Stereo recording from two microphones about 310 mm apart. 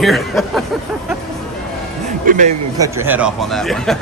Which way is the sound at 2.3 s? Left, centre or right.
Right.